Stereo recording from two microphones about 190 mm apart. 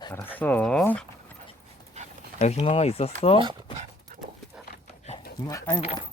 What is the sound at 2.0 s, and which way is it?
Dog, 35° right (ahead or behind).